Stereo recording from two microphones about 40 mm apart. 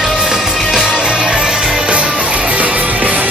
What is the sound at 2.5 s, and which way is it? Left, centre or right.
Music, right.